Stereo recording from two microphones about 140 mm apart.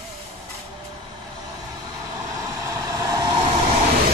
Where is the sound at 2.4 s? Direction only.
25° right (ahead or behind).